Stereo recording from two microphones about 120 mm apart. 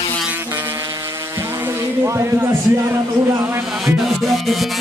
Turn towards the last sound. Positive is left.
turn(degrees=0)  # may be behind; listen again after turning